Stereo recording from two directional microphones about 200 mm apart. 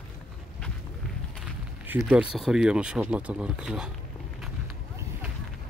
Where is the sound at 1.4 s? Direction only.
10° right (ahead or behind).